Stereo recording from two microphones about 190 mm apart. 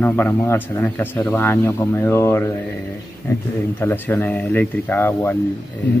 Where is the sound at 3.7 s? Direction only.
10° left (ahead or behind).